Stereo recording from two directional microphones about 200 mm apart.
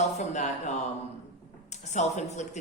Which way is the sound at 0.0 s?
35° left (ahead or behind).